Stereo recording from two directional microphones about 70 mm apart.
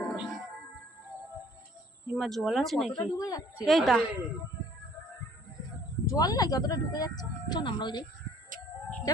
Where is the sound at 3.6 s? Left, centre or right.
Centre.